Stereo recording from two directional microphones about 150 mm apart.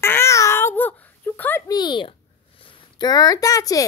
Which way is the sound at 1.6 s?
30° left (ahead or behind).